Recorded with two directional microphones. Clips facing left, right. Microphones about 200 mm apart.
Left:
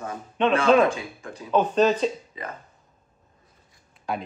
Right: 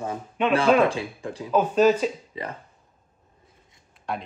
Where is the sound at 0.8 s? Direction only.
30° right (ahead or behind).